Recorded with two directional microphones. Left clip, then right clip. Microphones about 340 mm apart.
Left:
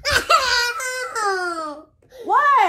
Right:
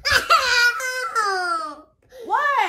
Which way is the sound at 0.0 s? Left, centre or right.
Centre.